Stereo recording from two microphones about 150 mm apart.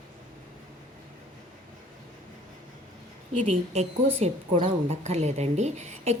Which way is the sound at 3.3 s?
45° right (ahead or behind).